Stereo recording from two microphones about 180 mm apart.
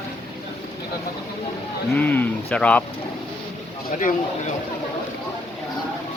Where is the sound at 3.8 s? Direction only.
45° left (ahead or behind).